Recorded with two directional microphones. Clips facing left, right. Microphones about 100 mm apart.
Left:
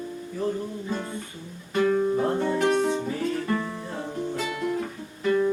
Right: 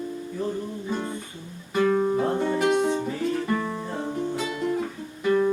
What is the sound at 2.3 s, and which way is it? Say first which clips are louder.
Music: right 1 dB; 10° right (ahead or behind).